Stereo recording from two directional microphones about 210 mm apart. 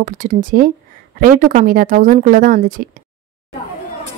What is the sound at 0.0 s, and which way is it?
Speech, 40° right (ahead or behind).